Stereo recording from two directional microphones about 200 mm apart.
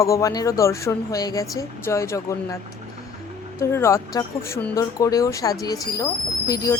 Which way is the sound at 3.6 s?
15° left (ahead or behind).